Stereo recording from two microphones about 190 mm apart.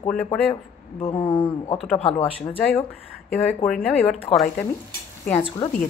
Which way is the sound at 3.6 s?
5° left (ahead or behind).